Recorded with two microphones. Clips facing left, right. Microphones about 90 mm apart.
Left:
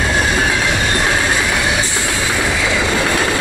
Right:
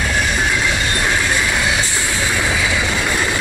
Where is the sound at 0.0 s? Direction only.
20° left (ahead or behind).